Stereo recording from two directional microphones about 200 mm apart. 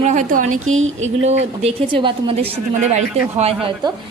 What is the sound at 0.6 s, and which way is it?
Speech, 90° right.